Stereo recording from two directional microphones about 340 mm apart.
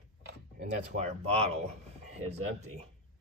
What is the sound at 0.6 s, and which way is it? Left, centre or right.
Speech, centre.